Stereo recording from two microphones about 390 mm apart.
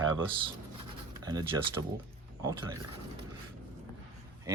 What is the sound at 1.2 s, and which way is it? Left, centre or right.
Speech, centre.